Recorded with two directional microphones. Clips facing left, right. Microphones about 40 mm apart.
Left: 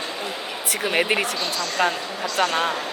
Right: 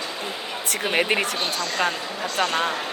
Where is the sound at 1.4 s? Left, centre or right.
Right.